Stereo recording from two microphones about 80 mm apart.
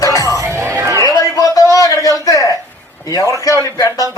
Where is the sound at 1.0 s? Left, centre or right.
Left.